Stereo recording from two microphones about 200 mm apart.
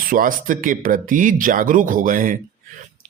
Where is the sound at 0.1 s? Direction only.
45° right (ahead or behind).